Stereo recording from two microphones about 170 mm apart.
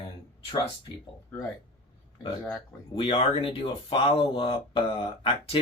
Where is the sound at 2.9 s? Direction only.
35° left (ahead or behind).